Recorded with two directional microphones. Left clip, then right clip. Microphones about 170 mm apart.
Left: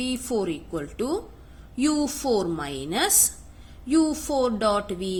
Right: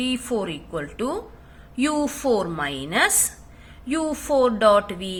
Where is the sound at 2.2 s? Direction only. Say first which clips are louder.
Right 3 dB; 15° left (ahead or behind).